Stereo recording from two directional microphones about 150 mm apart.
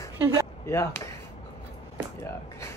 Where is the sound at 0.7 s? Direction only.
20° left (ahead or behind).